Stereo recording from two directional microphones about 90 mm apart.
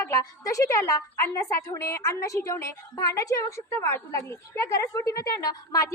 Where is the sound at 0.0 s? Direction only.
40° left (ahead or behind).